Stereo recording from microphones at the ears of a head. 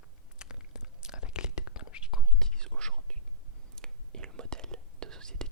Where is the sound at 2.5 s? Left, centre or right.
Right.